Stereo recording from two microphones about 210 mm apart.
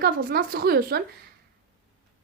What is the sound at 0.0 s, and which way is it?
A woman's voice, 45° right (ahead or behind).